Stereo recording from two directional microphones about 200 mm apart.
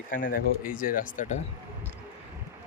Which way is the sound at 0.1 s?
45° left (ahead or behind).